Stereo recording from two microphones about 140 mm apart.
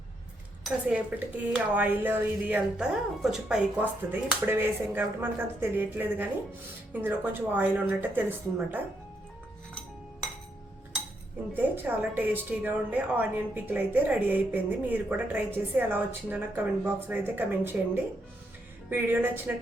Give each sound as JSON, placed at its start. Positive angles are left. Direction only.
{"t": 0.6, "sound": "a woman's voice", "side_deg": -10}
{"t": 11.5, "sound": "a woman's voice", "side_deg": -15}